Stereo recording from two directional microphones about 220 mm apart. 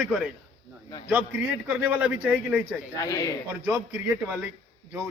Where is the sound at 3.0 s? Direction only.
15° left (ahead or behind).